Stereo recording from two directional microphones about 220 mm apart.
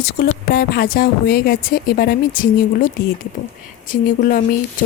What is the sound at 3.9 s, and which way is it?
Speech, 40° left (ahead or behind).